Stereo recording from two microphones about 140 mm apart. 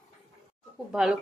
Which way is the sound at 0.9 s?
Centre (ahead or behind).